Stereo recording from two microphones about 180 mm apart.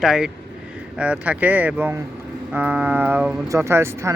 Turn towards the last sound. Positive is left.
turn(degrees=-15)  # may be behind; listen again after turning